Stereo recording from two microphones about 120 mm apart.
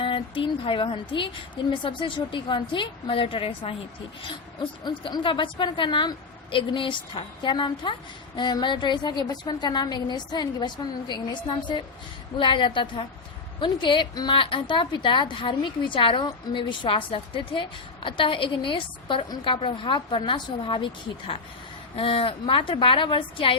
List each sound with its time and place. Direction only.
0.0 s a woman's voice: 45° left (ahead or behind)
4.8 s a woman's voice: 40° left (ahead or behind)